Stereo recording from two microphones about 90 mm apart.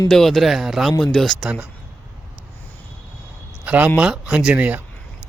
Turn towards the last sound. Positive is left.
turn(degrees=-15)  # may be behind; listen again after turning